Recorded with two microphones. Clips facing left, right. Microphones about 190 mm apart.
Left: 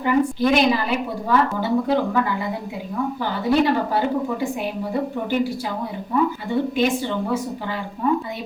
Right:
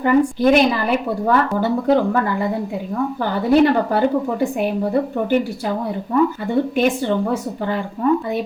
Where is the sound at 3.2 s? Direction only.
50° right (ahead or behind).